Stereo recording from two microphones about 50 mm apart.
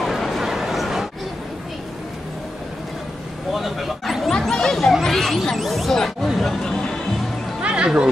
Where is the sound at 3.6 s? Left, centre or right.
Centre.